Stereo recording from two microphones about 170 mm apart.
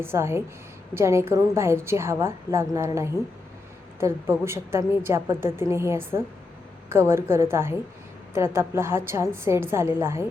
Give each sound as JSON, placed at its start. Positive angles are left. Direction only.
{"t": 0.0, "sound": "a woman's voice", "side_deg": -15}